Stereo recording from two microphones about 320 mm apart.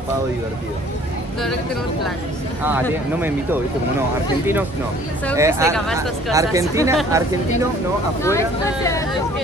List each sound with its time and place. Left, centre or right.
2.9 s speech: centre
5.3 s speech: centre
8.2 s speech: centre